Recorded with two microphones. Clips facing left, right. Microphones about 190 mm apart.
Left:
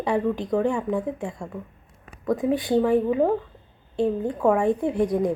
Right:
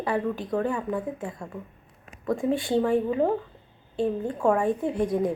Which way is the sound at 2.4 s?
15° left (ahead or behind).